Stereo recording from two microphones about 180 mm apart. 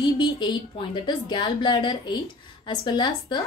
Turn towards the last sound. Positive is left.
turn(degrees=25)  # may be behind; listen again after turning